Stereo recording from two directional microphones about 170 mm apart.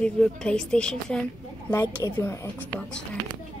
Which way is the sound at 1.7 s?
15° left (ahead or behind).